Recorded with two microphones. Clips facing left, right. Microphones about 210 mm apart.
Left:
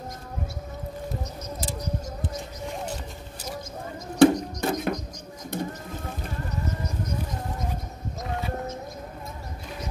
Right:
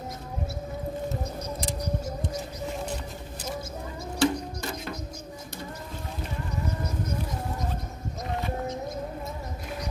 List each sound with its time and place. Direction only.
4.2 s music: 55° left (ahead or behind)